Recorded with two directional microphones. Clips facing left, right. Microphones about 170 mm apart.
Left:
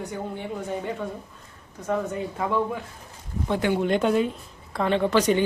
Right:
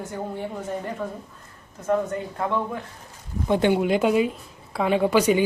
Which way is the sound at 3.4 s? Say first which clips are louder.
Right 4 dB; 20° right (ahead or behind).